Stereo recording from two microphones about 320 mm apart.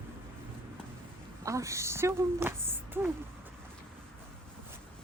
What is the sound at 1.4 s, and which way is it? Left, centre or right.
A woman's voice, centre.